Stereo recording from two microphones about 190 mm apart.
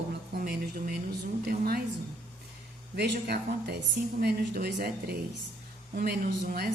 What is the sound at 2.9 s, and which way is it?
Speech, 60° right (ahead or behind).